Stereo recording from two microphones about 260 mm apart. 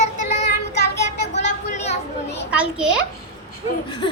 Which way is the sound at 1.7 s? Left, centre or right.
Left.